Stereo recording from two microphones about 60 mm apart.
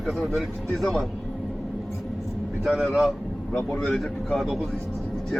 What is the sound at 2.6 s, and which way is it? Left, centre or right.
Speech, centre.